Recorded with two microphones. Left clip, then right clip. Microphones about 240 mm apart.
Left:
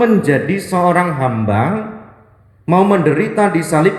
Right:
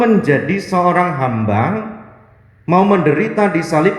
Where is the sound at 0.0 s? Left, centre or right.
Left.